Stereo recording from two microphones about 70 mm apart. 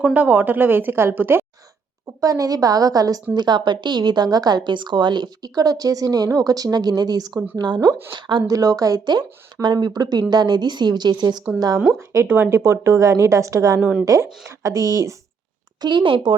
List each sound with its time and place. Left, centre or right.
0.1 s a woman's voice: right
2.2 s a woman's voice: right
3.3 s a woman's voice: right
7.6 s a woman's voice: right
11.9 s a woman's voice: right
15.8 s speech: right